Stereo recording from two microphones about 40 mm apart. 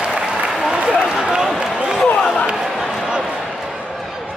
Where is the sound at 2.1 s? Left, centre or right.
Centre.